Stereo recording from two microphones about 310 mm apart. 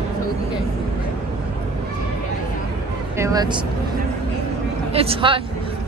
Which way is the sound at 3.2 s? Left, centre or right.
Centre.